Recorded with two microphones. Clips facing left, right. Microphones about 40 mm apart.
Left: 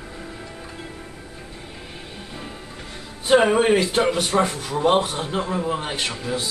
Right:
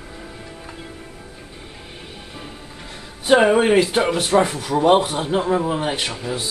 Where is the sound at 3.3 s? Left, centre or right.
Centre.